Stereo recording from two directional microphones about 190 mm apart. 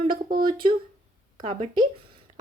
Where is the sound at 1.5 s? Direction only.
25° right (ahead or behind).